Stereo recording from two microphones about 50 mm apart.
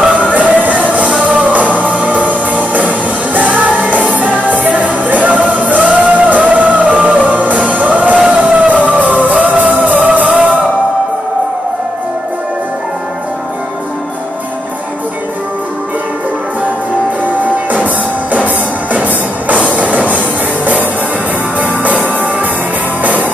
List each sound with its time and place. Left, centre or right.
0.0 s music: right
17.6 s music: right